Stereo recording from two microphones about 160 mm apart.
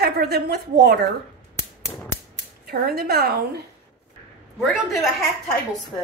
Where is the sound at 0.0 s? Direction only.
80° right.